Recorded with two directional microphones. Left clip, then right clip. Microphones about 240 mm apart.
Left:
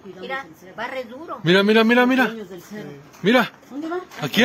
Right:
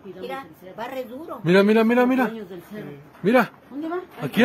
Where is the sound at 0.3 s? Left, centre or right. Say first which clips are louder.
Left 4 dB; right.